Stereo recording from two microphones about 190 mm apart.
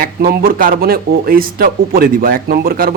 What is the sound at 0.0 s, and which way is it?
A man's voice, 50° right (ahead or behind).